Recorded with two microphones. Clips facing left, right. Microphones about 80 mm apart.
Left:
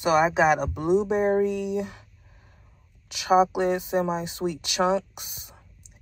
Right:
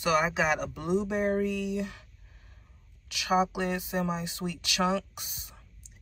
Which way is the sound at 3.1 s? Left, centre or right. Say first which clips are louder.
Left 7 dB; left.